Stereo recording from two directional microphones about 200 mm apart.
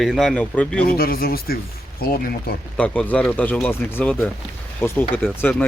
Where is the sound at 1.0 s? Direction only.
50° left (ahead or behind).